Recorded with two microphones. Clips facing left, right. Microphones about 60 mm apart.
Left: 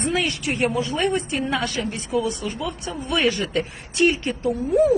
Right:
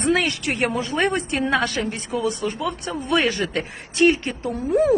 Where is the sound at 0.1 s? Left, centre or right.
Right.